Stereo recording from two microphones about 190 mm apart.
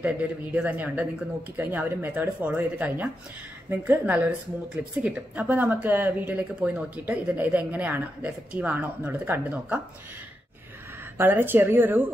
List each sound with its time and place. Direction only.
0.0 s a woman's voice: 10° right (ahead or behind)
11.1 s a woman's voice: 10° right (ahead or behind)